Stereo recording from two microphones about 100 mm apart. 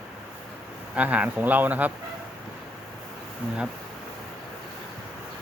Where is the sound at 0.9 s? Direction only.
15° right (ahead or behind).